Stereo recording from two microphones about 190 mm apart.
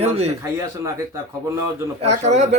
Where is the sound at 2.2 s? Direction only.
40° right (ahead or behind).